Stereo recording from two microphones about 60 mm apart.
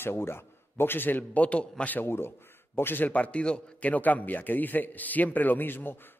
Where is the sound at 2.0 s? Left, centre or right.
Left.